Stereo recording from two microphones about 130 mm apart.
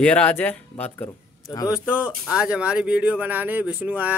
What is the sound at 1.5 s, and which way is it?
Speech, 30° left (ahead or behind).